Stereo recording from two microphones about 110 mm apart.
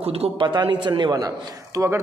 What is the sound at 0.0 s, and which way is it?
Speech, 65° right (ahead or behind).